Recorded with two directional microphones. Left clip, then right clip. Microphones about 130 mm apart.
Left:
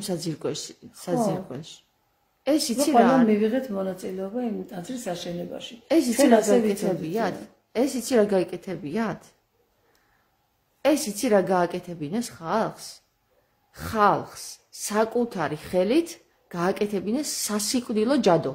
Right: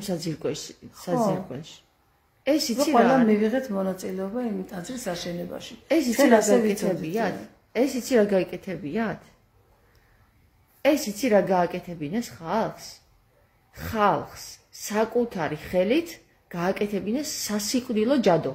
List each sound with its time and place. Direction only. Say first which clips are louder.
0.0 s speech: even; 20° left (ahead or behind)
10.8 s speech: even; 25° left (ahead or behind)